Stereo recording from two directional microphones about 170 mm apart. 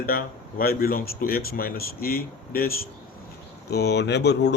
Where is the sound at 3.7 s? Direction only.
75° left (ahead or behind).